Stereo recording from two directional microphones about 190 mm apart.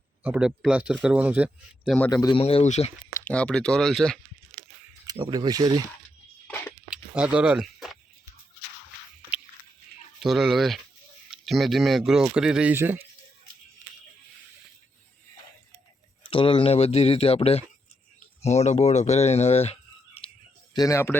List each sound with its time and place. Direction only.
0.2 s speech: 5° right (ahead or behind)
2.0 s a man's voice: 20° left (ahead or behind)
2.4 s speech: 30° left (ahead or behind)
3.1 s speech: 5° left (ahead or behind)
5.1 s speech: 20° right (ahead or behind)
7.2 s speech: 5° right (ahead or behind)
10.2 s speech: centre (ahead or behind)
16.3 s speech: 25° left (ahead or behind)
20.7 s speech: 15° left (ahead or behind)